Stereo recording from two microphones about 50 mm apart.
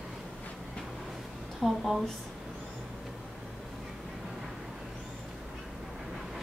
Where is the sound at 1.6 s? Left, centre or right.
Centre.